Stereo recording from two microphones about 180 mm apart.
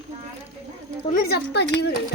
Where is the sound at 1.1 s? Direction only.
60° left (ahead or behind).